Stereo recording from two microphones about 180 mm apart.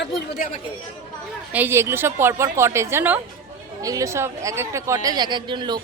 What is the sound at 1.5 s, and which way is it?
A woman's voice, 10° right (ahead or behind).